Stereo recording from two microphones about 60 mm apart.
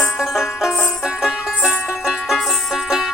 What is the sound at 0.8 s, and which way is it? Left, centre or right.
Music, centre.